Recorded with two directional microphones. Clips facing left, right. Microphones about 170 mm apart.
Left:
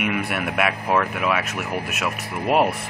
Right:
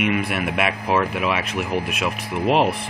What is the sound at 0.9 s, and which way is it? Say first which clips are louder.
Speech: right 1 dB; 15° right (ahead or behind).